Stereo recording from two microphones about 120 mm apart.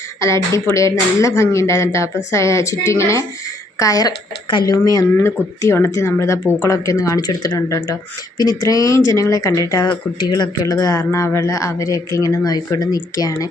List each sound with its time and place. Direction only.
0.2 s speech: 25° left (ahead or behind)